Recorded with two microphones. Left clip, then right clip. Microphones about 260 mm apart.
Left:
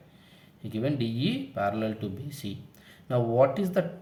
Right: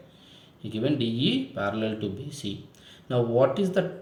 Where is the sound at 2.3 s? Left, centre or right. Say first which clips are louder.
Right 4 dB; left.